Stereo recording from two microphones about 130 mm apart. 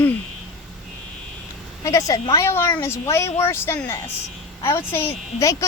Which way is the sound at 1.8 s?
25° left (ahead or behind).